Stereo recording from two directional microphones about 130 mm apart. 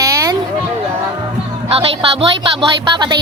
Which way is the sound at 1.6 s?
45° right (ahead or behind).